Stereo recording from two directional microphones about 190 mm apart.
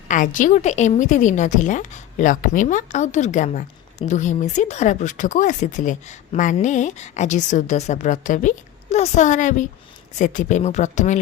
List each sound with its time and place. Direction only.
0.1 s a woman's voice: 45° left (ahead or behind)